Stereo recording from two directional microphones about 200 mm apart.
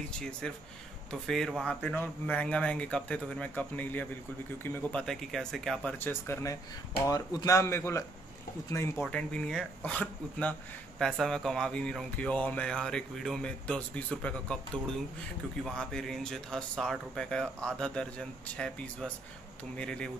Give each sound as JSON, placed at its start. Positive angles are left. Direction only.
{"t": 0.1, "sound": "speech", "side_deg": 5}
{"t": 8.9, "sound": "speech", "side_deg": 0}